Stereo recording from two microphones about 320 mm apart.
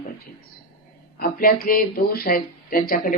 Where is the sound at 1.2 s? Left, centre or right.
Left.